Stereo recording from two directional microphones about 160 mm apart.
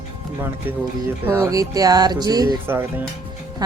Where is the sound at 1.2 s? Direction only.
15° right (ahead or behind).